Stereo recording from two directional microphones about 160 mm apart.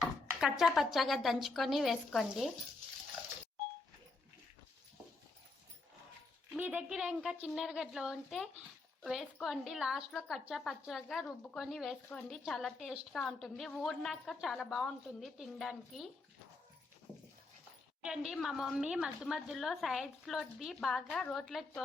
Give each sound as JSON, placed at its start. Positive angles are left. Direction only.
{"t": 0.0, "sound": "a woman's voice", "side_deg": 0}
{"t": 6.6, "sound": "a woman's voice", "side_deg": -10}
{"t": 18.0, "sound": "a woman's voice", "side_deg": -5}